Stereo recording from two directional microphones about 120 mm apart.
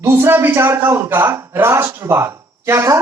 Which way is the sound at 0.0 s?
20° right (ahead or behind).